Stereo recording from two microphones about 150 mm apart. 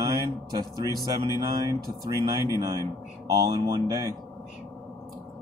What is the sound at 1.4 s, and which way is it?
Speech, 25° right (ahead or behind).